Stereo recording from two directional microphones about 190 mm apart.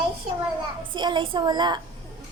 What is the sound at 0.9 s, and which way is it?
Speech, 25° right (ahead or behind).